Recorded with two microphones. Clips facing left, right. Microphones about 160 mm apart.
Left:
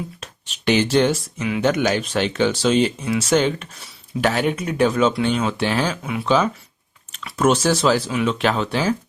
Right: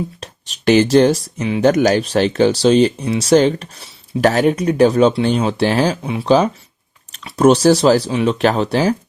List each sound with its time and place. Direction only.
0.2 s speech: 40° right (ahead or behind)